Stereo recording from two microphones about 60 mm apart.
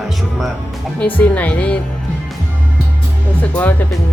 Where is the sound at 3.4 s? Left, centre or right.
Left.